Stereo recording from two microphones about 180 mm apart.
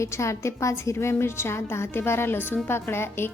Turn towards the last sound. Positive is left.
turn(degrees=15)  # may be behind; listen again after turning